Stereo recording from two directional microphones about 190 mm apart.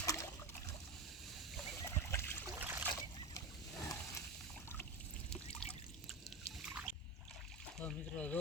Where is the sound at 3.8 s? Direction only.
15° left (ahead or behind).